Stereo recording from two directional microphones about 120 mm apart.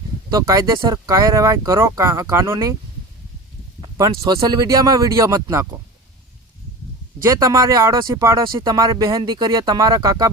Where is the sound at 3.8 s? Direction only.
30° right (ahead or behind).